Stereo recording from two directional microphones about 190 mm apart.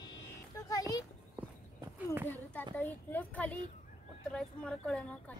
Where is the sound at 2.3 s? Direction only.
10° left (ahead or behind).